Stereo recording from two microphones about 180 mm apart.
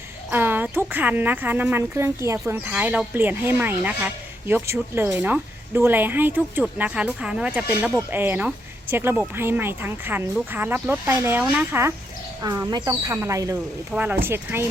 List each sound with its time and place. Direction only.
0.3 s speech: 10° right (ahead or behind)